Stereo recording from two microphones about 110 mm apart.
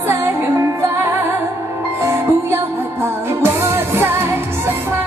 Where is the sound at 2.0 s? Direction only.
25° right (ahead or behind).